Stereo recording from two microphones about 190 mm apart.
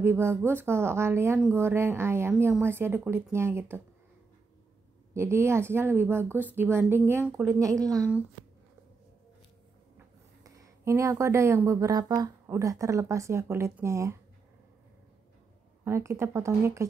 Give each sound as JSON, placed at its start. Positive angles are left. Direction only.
{"t": 0.0, "sound": "speech", "side_deg": -15}
{"t": 5.1, "sound": "speech", "side_deg": -15}
{"t": 9.9, "sound": "speech", "side_deg": -15}
{"t": 15.8, "sound": "speech", "side_deg": -15}